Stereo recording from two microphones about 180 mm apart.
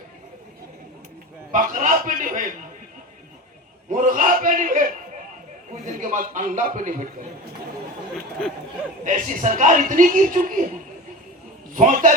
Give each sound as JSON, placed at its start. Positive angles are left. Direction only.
{"t": 1.5, "sound": "a man's voice", "side_deg": -45}
{"t": 3.8, "sound": "a man's voice", "side_deg": -45}
{"t": 8.1, "sound": "chatter", "side_deg": 5}
{"t": 9.0, "sound": "a man's voice", "side_deg": -45}
{"t": 11.7, "sound": "a man's voice", "side_deg": -45}